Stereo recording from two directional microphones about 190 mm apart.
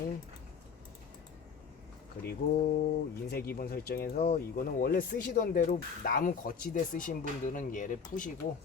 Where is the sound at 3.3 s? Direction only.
55° left (ahead or behind).